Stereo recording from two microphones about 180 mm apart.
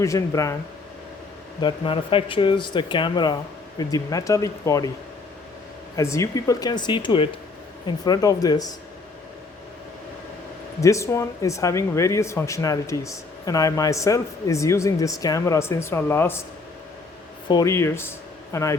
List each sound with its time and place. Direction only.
0.0 s speech: 15° left (ahead or behind)
1.6 s speech: 30° left (ahead or behind)
6.0 s speech: 15° left (ahead or behind)
10.8 s speech: 15° left (ahead or behind)
17.5 s speech: 20° left (ahead or behind)